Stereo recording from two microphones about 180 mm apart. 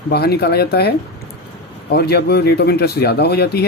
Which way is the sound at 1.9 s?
65° left (ahead or behind).